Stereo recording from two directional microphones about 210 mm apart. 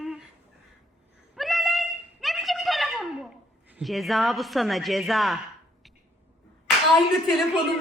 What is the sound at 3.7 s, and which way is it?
A woman's voice, centre (ahead or behind).